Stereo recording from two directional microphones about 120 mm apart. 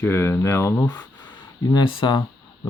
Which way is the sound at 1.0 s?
10° left (ahead or behind).